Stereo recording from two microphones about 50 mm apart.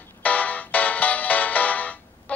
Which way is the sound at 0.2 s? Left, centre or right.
Left.